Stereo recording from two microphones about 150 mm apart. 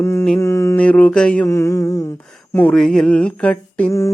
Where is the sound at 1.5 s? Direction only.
20° left (ahead or behind).